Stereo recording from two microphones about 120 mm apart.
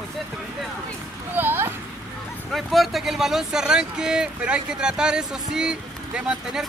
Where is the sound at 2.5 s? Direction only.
Centre (ahead or behind).